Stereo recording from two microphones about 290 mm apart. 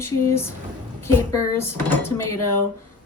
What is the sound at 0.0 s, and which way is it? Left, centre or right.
Speech, centre.